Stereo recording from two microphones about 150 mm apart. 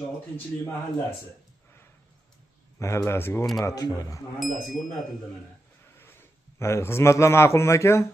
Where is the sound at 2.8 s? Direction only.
20° left (ahead or behind).